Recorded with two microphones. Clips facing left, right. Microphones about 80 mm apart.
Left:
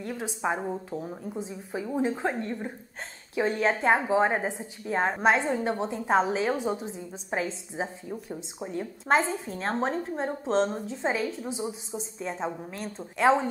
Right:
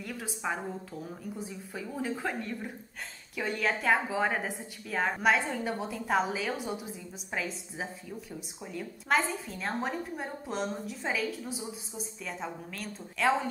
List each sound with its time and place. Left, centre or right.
0.0 s a woman's voice: left